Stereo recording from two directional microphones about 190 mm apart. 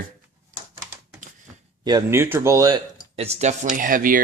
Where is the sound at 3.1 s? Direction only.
30° right (ahead or behind).